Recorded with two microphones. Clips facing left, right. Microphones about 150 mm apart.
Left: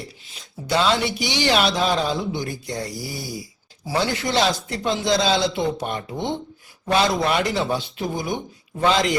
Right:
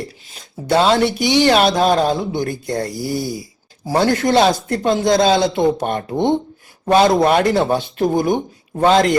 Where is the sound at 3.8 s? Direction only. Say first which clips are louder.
Right 7 dB; 45° right (ahead or behind).